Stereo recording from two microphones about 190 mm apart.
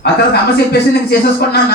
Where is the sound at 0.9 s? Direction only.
55° left (ahead or behind).